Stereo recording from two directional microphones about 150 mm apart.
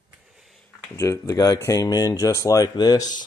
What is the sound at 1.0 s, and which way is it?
Speech, 20° left (ahead or behind).